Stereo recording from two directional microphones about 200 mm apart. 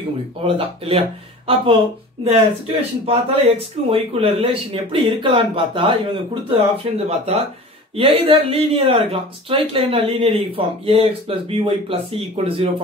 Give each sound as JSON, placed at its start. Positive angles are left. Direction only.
{"t": 0.6, "sound": "speech", "side_deg": -30}